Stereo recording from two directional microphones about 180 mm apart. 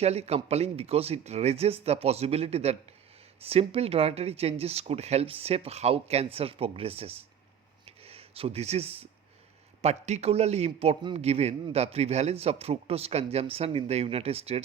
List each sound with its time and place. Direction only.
0.0 s speech: 35° right (ahead or behind)
7.9 s a sound: 35° right (ahead or behind)
9.8 s speech: 40° right (ahead or behind)